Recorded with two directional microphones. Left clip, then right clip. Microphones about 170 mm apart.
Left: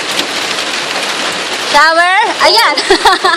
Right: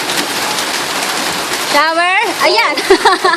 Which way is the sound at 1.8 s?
10° right (ahead or behind).